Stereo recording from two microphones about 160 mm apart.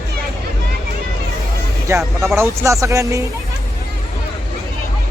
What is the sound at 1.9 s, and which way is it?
Speech, 15° right (ahead or behind).